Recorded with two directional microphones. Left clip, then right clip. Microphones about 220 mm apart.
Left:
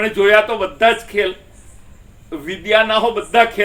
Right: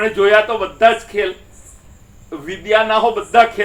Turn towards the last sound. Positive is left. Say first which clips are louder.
# right 2 dB
turn(degrees=35)  # may be behind; listen again after turning